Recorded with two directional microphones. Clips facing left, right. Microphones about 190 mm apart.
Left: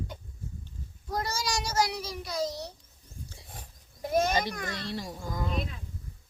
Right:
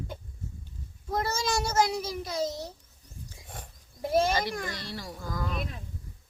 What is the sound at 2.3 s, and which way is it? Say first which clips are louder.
Speech: even; 25° right (ahead or behind).